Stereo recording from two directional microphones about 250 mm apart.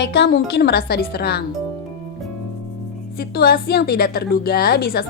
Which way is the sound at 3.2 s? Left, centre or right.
Left.